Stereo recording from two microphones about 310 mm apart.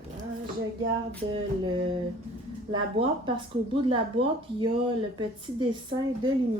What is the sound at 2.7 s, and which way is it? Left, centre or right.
Speech, centre.